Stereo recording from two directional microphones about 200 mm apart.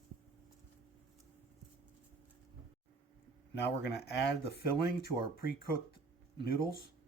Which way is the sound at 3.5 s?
60° left (ahead or behind).